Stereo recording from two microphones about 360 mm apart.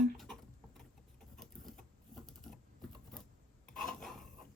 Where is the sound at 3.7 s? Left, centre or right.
Centre.